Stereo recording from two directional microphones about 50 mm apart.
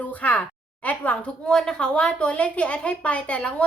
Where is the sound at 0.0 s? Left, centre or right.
Left.